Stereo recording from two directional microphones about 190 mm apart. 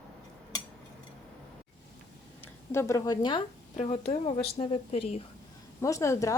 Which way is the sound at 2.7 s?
15° left (ahead or behind).